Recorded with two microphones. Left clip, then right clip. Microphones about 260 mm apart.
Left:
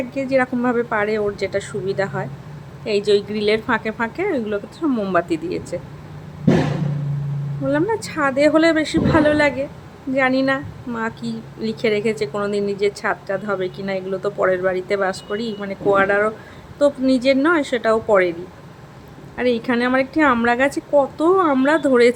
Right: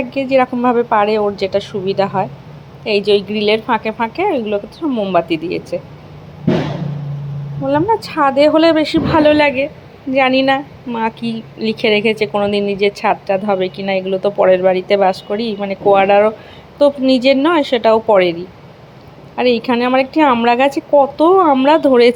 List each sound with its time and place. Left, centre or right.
0.1 s a woman's voice: centre
7.7 s a woman's voice: centre
11.9 s a woman's voice: centre
12.2 s a woman's voice: centre
12.7 s a woman's voice: centre
13.1 s a woman's voice: centre
19.4 s a woman's voice: centre